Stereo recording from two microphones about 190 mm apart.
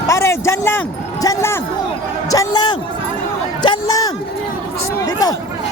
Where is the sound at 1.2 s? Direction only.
15° left (ahead or behind).